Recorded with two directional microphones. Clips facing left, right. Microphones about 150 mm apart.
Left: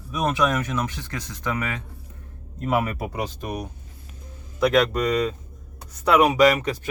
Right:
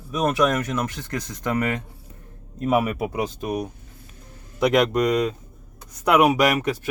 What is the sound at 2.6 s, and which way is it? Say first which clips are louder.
Speech: right 3 dB; 15° right (ahead or behind).